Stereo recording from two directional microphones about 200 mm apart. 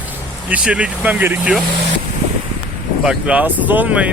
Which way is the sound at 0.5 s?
5° right (ahead or behind).